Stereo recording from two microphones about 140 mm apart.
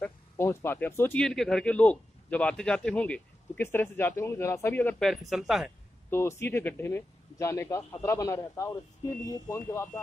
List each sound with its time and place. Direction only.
0.0 s speech: 15° left (ahead or behind)
1.2 s a man's voice: 5° left (ahead or behind)
4.9 s speech: centre (ahead or behind)
6.0 s a man's voice: 20° left (ahead or behind)